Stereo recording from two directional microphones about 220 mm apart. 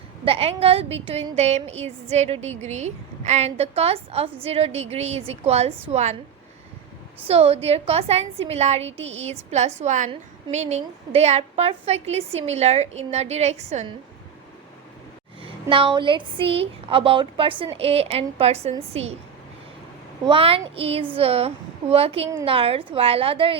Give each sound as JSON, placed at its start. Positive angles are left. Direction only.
{"t": 0.3, "sound": "a woman's voice", "side_deg": -25}
{"t": 7.3, "sound": "a woman's voice", "side_deg": -30}
{"t": 15.7, "sound": "a woman's voice", "side_deg": -20}
{"t": 20.2, "sound": "a woman's voice", "side_deg": -25}